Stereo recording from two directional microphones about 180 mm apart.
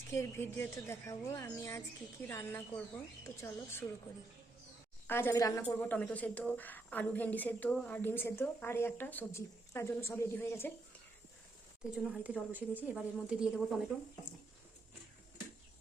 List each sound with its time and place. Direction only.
0.1 s speech: 15° left (ahead or behind)
5.0 s speech: 10° left (ahead or behind)
11.9 s speech: 5° right (ahead or behind)